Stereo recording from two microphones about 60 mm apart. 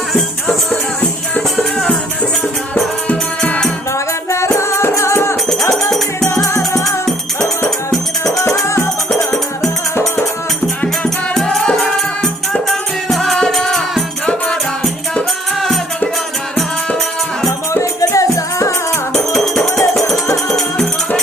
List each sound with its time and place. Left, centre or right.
3.1 s music: left
3.9 s music: left
6.2 s music: left
8.2 s music: left
11.3 s music: centre
18.1 s music: left
19.1 s music: centre